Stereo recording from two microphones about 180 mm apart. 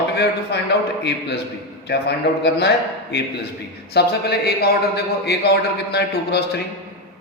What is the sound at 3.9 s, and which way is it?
A man's voice, 65° left (ahead or behind).